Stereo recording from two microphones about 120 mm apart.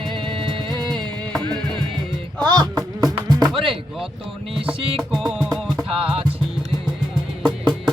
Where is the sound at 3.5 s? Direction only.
45° right (ahead or behind).